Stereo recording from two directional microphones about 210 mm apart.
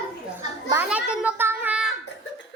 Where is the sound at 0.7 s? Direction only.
10° right (ahead or behind).